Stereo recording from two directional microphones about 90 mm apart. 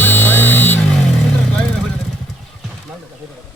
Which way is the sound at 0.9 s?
5° left (ahead or behind).